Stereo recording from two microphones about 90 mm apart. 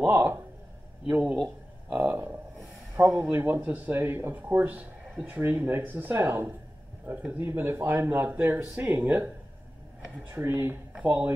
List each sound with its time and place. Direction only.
0.0 s a sound: 25° right (ahead or behind)
1.4 s speech: 5° right (ahead or behind)
3.0 s speech: 25° right (ahead or behind)
5.4 s speech: 25° right (ahead or behind)
10.3 s speech: 30° right (ahead or behind)
11.0 s speech: 15° right (ahead or behind)